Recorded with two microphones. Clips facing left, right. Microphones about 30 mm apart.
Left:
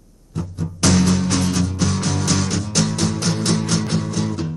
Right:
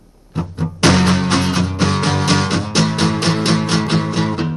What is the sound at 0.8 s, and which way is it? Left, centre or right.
Music, right.